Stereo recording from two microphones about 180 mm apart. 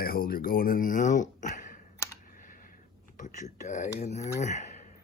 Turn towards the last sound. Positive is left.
turn(degrees=40)  # may be behind; listen again after turning